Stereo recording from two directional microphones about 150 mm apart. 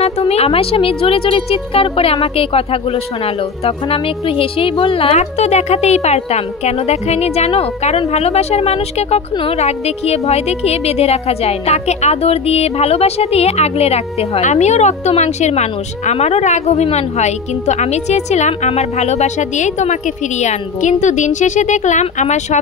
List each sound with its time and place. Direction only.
0.0 s a woman's voice: 45° left (ahead or behind)